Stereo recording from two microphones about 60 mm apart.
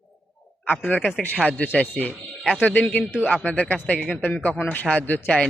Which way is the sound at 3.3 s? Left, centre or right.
Centre.